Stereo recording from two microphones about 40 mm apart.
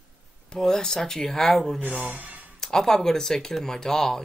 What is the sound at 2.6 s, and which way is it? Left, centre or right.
Speech, centre.